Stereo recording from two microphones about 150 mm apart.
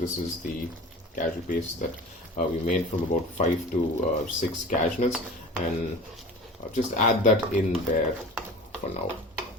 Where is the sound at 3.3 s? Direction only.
55° left (ahead or behind).